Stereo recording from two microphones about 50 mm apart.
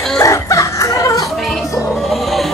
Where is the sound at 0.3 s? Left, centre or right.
Left.